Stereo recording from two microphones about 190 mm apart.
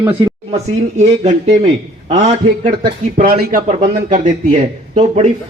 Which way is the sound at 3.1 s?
50° right (ahead or behind).